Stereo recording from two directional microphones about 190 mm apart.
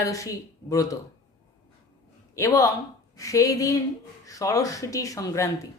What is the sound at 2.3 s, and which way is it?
Speech, 15° left (ahead or behind).